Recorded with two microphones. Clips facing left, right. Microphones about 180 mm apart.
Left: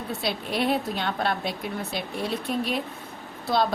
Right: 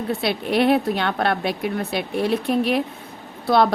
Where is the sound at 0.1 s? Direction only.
65° right (ahead or behind).